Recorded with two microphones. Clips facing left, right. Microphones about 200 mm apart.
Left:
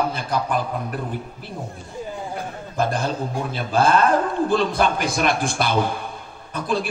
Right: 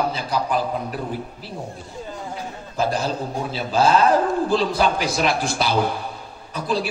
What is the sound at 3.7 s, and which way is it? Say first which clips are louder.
A man's voice: right 1 dB; 55° left (ahead or behind).